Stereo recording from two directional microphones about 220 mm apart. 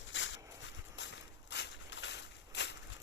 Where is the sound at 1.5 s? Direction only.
55° left (ahead or behind).